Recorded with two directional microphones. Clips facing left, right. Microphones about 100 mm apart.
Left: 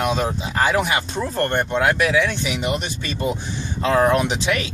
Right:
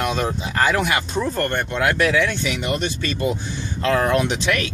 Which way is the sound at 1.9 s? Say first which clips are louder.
Even; 10° left (ahead or behind).